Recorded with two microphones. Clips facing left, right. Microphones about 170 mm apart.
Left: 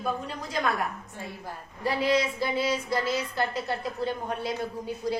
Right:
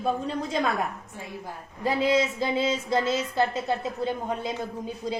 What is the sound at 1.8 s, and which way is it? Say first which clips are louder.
Speech: right 2 dB; 20° right (ahead or behind).